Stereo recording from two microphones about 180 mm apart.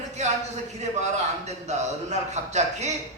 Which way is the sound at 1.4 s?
40° right (ahead or behind).